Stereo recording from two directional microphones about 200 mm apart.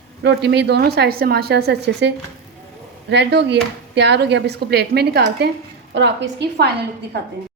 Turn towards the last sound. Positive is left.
turn(degrees=-55)  # may be behind; listen again after turning